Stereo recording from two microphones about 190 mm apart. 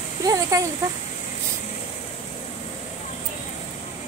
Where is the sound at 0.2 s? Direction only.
20° right (ahead or behind).